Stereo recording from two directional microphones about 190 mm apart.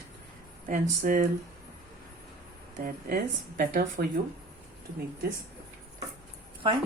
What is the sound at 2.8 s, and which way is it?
Speech, 50° right (ahead or behind).